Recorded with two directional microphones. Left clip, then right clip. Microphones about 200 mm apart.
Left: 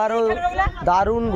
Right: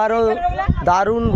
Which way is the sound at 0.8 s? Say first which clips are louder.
Right 3 dB; 35° right (ahead or behind).